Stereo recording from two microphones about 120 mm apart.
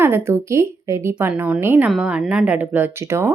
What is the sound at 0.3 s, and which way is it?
Speech, 25° right (ahead or behind).